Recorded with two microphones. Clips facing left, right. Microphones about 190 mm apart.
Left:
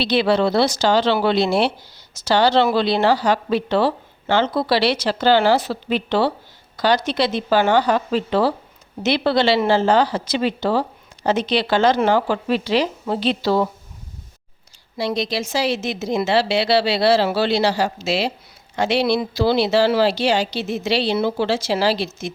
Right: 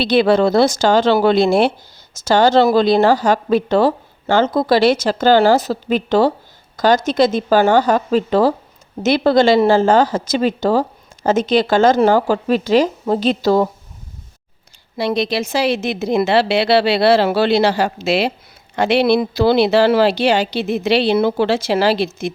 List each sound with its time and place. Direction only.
0.0 s a woman's voice: 50° right (ahead or behind)
14.9 s speech: 60° right (ahead or behind)